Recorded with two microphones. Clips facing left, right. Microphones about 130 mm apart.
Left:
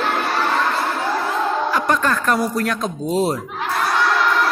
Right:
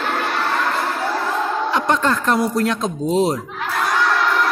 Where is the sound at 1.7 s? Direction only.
20° right (ahead or behind).